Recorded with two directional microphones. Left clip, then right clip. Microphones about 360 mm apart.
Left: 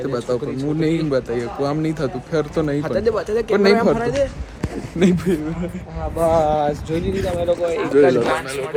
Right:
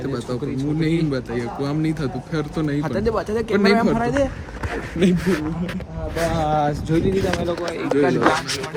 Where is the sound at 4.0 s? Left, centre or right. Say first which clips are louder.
Left 1 dB; centre.